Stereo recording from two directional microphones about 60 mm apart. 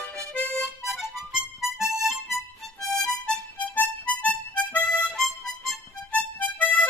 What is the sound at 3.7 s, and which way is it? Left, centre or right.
Harmonica, left.